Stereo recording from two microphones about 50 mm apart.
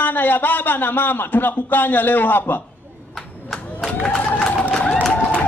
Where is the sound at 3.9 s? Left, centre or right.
Left.